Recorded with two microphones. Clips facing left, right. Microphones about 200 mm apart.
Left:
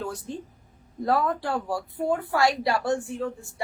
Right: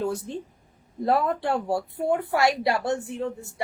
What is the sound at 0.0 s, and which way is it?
A woman's voice, 25° right (ahead or behind).